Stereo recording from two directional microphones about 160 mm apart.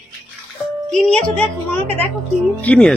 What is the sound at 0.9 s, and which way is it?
A woman's voice, 5° left (ahead or behind).